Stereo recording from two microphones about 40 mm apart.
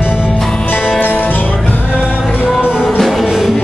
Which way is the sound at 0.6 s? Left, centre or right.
Left.